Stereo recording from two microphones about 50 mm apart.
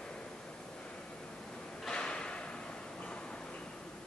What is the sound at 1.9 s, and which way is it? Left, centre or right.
Drawer open or close, centre.